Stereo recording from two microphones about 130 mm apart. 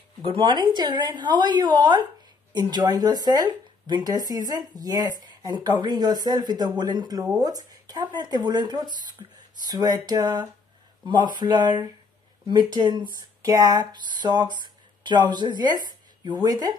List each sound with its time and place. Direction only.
0.2 s speech: 40° right (ahead or behind)